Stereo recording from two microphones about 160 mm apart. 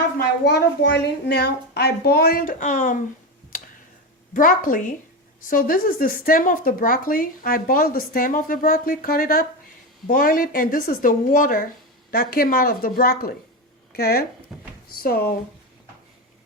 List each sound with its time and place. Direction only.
0.2 s a child's voice: 90° left; by 3.0 s 55° left (ahead or behind)
4.4 s speech: 60° left (ahead or behind)
14.5 s speech: 5° right (ahead or behind)
15.0 s speech: 70° left (ahead or behind)